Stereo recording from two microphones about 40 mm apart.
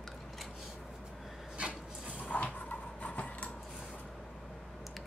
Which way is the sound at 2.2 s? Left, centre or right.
Left.